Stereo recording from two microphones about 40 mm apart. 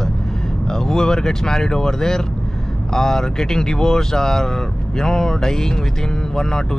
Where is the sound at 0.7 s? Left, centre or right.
Centre.